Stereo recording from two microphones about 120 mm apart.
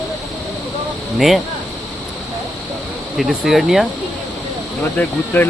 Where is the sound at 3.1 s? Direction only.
Centre (ahead or behind).